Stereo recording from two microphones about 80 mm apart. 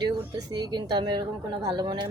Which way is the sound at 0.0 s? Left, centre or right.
Right.